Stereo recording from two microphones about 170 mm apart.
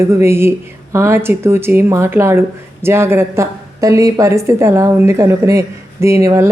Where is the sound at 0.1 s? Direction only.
15° right (ahead or behind).